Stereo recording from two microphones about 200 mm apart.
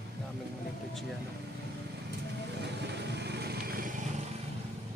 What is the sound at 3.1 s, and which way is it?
Vehicle, 55° right (ahead or behind).